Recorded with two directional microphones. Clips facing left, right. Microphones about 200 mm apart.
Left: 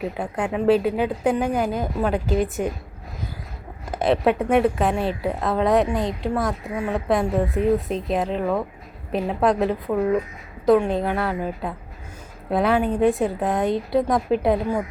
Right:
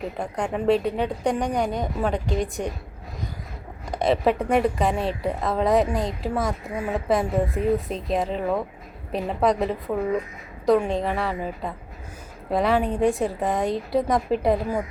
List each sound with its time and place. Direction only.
0.2 s a woman's voice: 5° left (ahead or behind)
3.9 s a woman's voice: centre (ahead or behind)